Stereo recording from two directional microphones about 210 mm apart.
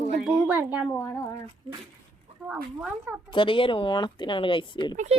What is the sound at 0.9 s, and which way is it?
Speech, 10° left (ahead or behind).